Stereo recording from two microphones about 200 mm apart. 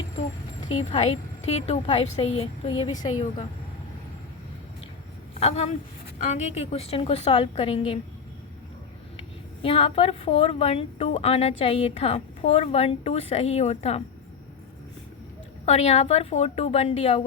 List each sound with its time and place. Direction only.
0.7 s speech: 30° left (ahead or behind)
5.3 s a woman's voice: 30° left (ahead or behind)
9.6 s speech: 30° left (ahead or behind)
15.6 s speech: 30° left (ahead or behind)